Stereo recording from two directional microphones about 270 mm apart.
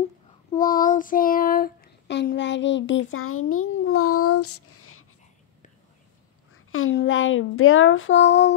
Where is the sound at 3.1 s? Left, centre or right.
Left.